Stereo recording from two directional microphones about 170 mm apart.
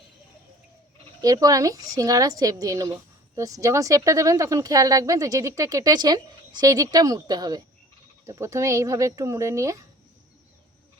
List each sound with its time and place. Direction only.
1.2 s a woman's voice: 20° right (ahead or behind)